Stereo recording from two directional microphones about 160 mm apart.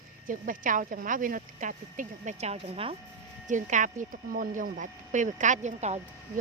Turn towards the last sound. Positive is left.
turn(degrees=-45)  # may be behind; listen again after turning